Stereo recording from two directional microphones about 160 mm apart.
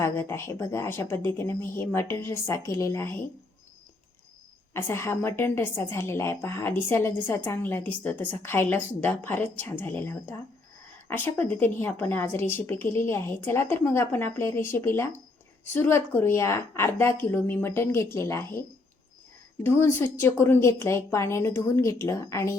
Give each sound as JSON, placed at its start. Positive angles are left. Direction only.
{"t": 0.0, "sound": "a woman's voice", "side_deg": 15}
{"t": 4.7, "sound": "a woman's voice", "side_deg": 15}
{"t": 19.6, "sound": "a woman's voice", "side_deg": 15}